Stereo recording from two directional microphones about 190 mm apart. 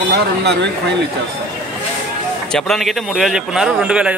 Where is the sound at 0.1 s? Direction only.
60° right (ahead or behind).